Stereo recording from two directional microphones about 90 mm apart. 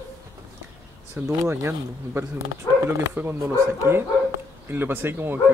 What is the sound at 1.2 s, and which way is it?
A man's voice, 30° right (ahead or behind).